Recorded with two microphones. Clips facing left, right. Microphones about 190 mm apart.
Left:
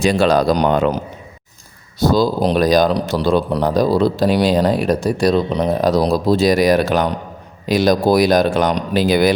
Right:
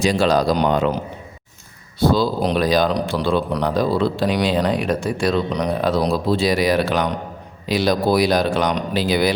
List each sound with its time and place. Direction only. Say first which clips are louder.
0.0 s speech: left 3 dB; 60° left (ahead or behind)
2.0 s a man's voice: left 2 dB; 40° left (ahead or behind)